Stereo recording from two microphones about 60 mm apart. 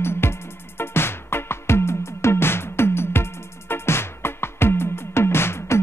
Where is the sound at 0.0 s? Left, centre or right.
Left.